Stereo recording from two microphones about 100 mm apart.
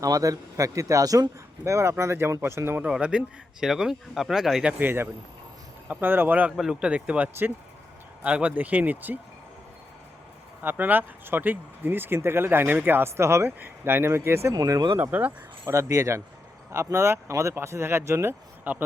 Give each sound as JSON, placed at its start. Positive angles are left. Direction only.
{"t": 0.0, "sound": "speech", "side_deg": -35}
{"t": 2.8, "sound": "speech", "side_deg": -10}
{"t": 4.8, "sound": "speech", "side_deg": -20}
{"t": 10.6, "sound": "speech", "side_deg": -20}
{"t": 14.5, "sound": "speech", "side_deg": -40}
{"t": 14.9, "sound": "speech", "side_deg": -15}
{"t": 15.6, "sound": "speech", "side_deg": -30}